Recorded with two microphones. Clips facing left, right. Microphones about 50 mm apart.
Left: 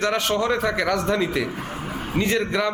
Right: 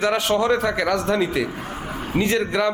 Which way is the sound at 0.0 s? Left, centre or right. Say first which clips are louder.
Right 2 dB; centre.